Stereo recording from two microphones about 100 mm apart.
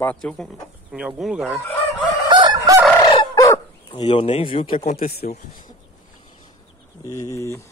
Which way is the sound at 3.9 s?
60° left (ahead or behind).